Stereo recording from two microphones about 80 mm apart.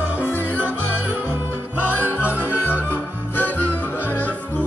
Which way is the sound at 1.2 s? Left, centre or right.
Right.